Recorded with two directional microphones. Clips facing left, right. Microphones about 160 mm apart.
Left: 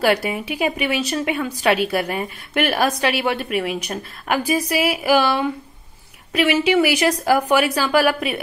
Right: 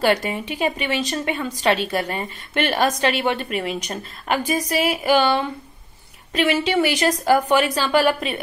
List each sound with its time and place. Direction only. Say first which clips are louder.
0.0 s a woman's voice: left 1 dB; 5° left (ahead or behind)